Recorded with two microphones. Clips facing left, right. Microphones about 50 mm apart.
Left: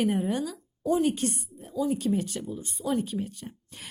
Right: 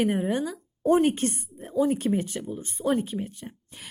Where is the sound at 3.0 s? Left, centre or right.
Right.